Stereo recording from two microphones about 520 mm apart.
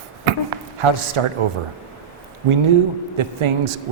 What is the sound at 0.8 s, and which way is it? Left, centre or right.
Speech, right.